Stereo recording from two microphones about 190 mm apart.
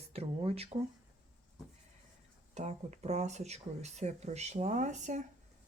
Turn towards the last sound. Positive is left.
turn(degrees=-40)  # may be behind; listen again after turning